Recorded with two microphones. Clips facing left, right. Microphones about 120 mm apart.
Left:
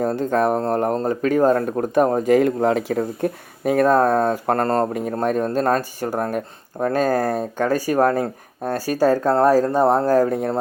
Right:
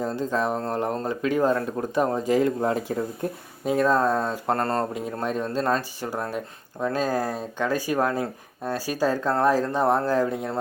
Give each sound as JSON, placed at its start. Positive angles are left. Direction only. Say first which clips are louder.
{"t": 0.0, "sound": "speech", "louder": "left 6 dB", "side_deg": 55}